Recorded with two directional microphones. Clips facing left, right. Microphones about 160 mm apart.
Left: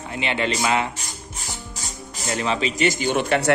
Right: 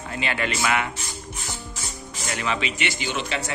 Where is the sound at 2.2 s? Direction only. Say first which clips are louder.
Left 4 dB; 30° left (ahead or behind); by 3.5 s 60° left (ahead or behind).